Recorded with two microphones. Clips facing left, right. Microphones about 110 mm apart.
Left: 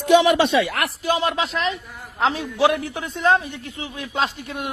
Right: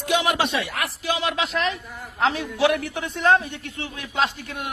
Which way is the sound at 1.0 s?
40° left (ahead or behind).